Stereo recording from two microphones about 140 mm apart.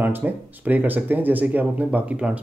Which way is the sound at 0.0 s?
15° right (ahead or behind).